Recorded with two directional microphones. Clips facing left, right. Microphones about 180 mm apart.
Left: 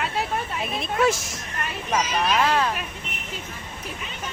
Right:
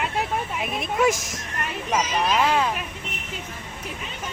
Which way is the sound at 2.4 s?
15° right (ahead or behind).